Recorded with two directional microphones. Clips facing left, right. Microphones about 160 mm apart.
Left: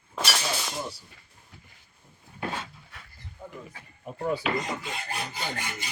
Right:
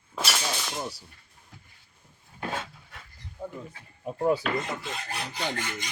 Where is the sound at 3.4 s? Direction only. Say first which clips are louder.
Right 6 dB; 30° right (ahead or behind).